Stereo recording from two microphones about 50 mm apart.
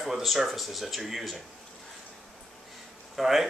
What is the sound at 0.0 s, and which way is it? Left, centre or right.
Speech, centre.